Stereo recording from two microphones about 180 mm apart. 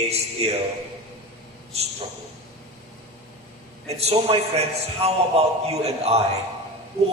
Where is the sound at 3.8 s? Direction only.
35° right (ahead or behind).